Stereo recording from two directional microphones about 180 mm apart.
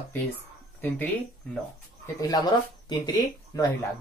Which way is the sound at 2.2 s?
20° left (ahead or behind).